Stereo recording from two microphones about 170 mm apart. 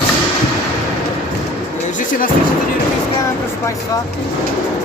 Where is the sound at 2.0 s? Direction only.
50° left (ahead or behind).